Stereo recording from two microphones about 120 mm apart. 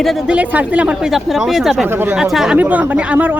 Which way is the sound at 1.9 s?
20° right (ahead or behind).